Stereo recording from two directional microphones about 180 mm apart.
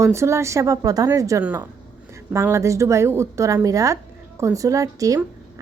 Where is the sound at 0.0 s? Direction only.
15° right (ahead or behind).